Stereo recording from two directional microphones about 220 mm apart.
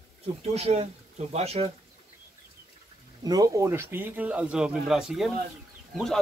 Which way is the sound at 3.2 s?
15° right (ahead or behind).